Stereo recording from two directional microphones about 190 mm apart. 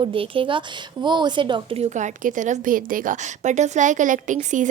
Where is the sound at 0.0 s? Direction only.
25° right (ahead or behind).